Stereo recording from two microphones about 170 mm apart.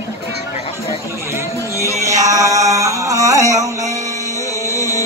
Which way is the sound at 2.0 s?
20° right (ahead or behind).